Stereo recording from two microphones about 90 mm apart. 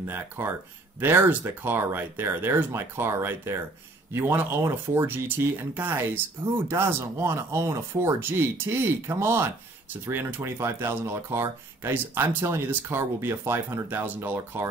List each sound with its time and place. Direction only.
0.0 s speech: 25° right (ahead or behind)